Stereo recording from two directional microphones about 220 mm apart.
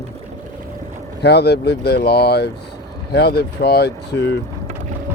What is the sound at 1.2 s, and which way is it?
Speech, 50° left (ahead or behind).